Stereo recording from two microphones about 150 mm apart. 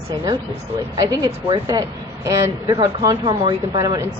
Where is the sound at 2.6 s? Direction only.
30° right (ahead or behind).